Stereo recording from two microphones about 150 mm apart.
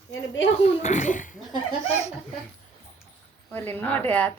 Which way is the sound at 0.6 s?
50° left (ahead or behind).